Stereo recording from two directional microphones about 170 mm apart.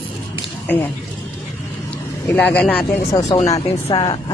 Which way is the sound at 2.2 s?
10° left (ahead or behind).